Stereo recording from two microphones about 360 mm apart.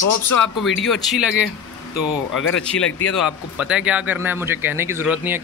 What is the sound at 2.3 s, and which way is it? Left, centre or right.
Speech, left.